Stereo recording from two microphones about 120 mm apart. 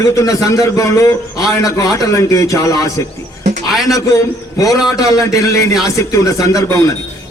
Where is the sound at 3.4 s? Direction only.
75° right (ahead or behind).